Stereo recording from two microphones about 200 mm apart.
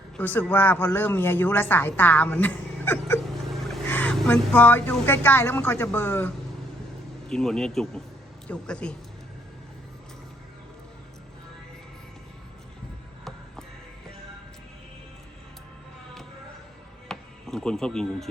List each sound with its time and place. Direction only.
0.2 s a woman's voice: 10° left (ahead or behind)
17.1 s music: centre (ahead or behind)